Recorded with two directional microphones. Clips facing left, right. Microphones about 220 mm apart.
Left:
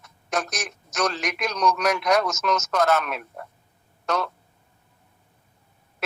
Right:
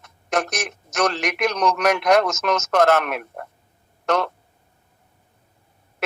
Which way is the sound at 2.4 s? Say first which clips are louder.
Right 4 dB; 65° right (ahead or behind).